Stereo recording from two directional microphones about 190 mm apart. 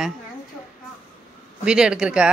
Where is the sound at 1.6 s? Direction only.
5° right (ahead or behind).